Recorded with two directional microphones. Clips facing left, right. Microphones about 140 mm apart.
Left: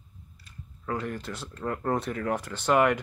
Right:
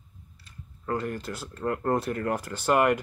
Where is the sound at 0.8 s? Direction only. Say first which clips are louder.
Right 2 dB; 5° right (ahead or behind).